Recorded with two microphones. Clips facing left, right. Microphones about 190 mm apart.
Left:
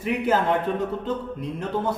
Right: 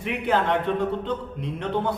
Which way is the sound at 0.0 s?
5° left (ahead or behind).